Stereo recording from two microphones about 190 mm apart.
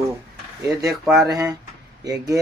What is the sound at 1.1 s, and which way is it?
Speech, centre (ahead or behind).